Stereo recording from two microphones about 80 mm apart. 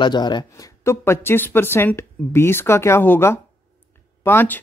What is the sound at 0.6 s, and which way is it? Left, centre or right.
Speech, left.